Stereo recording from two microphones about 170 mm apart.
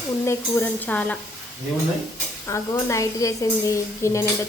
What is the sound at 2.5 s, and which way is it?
A woman's voice, 15° left (ahead or behind).